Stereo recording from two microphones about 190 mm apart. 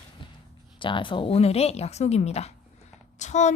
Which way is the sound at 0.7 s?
25° left (ahead or behind).